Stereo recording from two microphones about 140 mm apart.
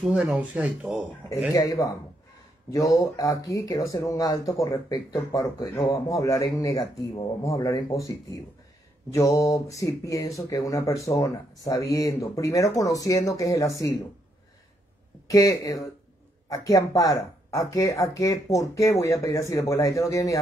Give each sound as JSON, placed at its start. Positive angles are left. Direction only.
{"t": 0.1, "sound": "speech", "side_deg": -5}
{"t": 1.5, "sound": "speech", "side_deg": 25}
{"t": 15.2, "sound": "speech", "side_deg": 25}